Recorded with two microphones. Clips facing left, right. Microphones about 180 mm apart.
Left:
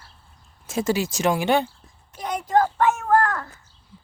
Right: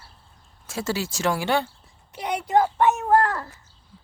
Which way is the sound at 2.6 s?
20° right (ahead or behind).